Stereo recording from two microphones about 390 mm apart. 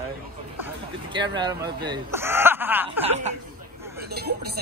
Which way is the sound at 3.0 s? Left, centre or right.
Centre.